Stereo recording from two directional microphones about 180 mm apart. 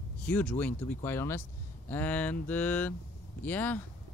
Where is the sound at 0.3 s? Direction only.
10° left (ahead or behind).